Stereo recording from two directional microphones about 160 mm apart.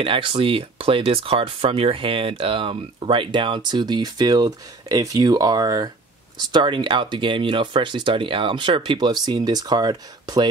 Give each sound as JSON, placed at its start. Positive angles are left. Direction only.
{"t": 0.0, "sound": "speech", "side_deg": -30}